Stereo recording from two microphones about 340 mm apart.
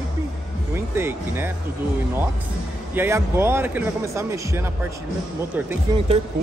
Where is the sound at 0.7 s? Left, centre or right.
Centre.